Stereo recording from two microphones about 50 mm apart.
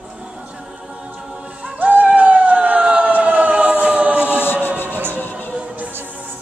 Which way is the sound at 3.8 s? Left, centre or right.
Right.